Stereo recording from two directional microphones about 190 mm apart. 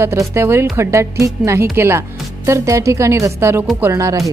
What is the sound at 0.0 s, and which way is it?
Speech, 15° right (ahead or behind).